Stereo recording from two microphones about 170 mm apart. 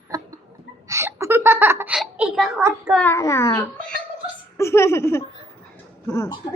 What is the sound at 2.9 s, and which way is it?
A child's voice, 10° left (ahead or behind).